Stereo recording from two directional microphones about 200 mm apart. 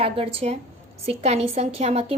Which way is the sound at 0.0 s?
30° right (ahead or behind).